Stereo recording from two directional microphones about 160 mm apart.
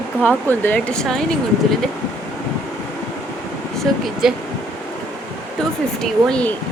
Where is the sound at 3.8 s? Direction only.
Centre (ahead or behind).